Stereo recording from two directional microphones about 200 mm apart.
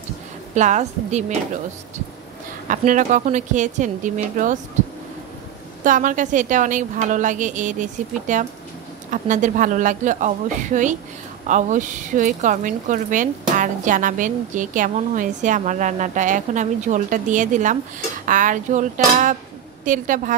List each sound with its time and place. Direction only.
0.6 s a woman's voice: 35° right (ahead or behind)
2.7 s a woman's voice: 40° right (ahead or behind)
5.9 s a woman's voice: 40° right (ahead or behind)